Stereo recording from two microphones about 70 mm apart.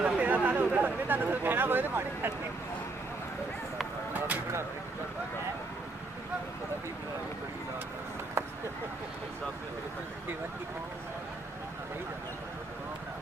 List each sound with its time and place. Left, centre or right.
0.0 s speech: right